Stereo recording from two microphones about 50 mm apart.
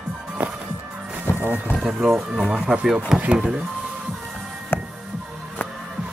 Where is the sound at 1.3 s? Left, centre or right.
Left.